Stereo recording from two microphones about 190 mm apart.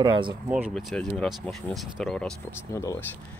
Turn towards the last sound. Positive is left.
turn(degrees=15)  # may be behind; listen again after turning